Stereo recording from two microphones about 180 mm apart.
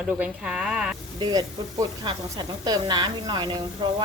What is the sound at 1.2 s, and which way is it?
Speech, 20° right (ahead or behind).